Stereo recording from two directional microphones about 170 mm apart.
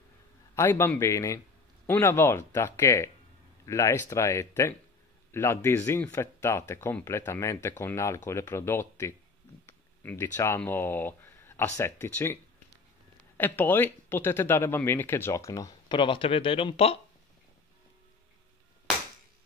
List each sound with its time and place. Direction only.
0.6 s speech: 15° left (ahead or behind)
13.4 s speech: 10° left (ahead or behind); by 17.0 s 35° left (ahead or behind)